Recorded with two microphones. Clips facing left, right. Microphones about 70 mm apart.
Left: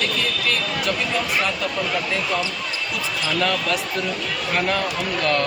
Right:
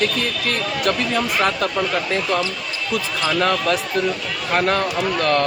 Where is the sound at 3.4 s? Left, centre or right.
Right.